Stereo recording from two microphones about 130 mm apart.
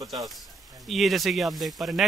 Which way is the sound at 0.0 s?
25° right (ahead or behind).